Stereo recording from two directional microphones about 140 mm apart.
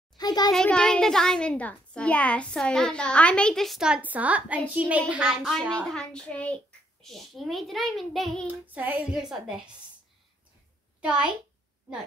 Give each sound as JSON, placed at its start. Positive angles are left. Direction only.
{"t": 0.2, "sound": "a sound", "side_deg": 30}
{"t": 0.5, "sound": "a child's voice", "side_deg": 5}
{"t": 8.6, "sound": "a woman's voice", "side_deg": -10}
{"t": 11.0, "sound": "a child's voice", "side_deg": -10}